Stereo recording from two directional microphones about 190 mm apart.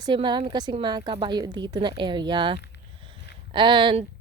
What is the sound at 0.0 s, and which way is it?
A woman's voice, 25° right (ahead or behind).